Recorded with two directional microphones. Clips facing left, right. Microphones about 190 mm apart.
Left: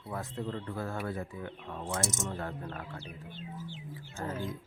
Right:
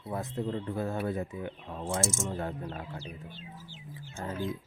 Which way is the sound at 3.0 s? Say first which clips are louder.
Right 1 dB; 55° left (ahead or behind).